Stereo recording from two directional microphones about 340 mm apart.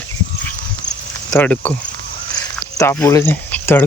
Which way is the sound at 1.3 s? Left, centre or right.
Centre.